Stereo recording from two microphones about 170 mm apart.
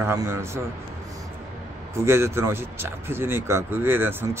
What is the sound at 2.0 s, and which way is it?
Speech, 15° right (ahead or behind).